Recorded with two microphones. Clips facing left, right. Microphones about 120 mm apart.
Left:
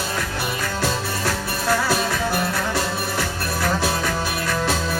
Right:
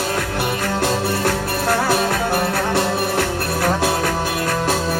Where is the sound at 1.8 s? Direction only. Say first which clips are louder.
Right 4 dB; 60° right (ahead or behind).